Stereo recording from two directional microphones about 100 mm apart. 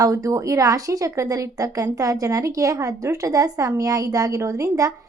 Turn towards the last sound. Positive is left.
turn(degrees=-30)  # may be behind; listen again after turning